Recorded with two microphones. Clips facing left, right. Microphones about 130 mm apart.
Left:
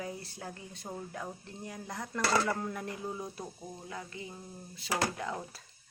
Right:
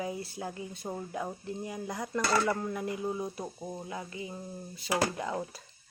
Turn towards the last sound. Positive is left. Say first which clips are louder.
# right 3 dB
turn(degrees=-5)  # may be behind; listen again after turning